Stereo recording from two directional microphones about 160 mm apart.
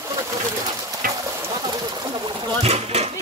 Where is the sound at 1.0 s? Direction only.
60° right (ahead or behind).